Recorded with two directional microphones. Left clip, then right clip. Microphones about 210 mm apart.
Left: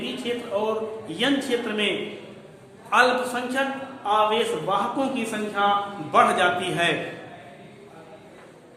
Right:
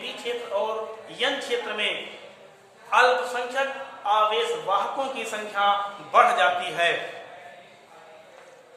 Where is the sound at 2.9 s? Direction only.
20° left (ahead or behind); by 6.9 s 5° left (ahead or behind).